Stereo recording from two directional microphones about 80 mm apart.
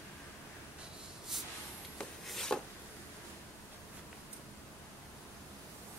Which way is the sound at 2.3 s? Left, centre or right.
Centre.